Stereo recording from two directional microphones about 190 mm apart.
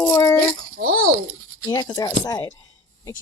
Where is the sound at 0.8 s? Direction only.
50° right (ahead or behind).